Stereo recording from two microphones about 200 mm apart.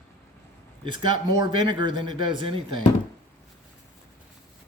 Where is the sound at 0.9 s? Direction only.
25° right (ahead or behind).